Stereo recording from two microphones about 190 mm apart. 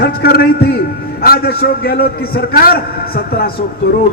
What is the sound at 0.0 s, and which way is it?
A man's voice, 55° left (ahead or behind).